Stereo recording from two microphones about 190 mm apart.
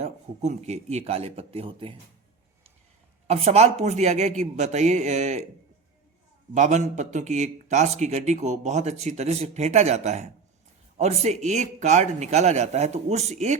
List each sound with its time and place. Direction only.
0.0 s a man's voice: 35° right (ahead or behind)
3.2 s a man's voice: 35° right (ahead or behind)
6.5 s a man's voice: 40° right (ahead or behind)